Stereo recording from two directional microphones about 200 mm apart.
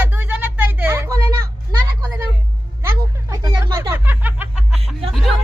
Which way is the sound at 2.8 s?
20° right (ahead or behind).